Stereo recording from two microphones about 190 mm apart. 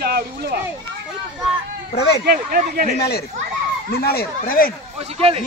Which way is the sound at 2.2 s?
50° right (ahead or behind).